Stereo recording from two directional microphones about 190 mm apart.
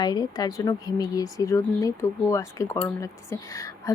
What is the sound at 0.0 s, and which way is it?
A woman's voice, 20° left (ahead or behind).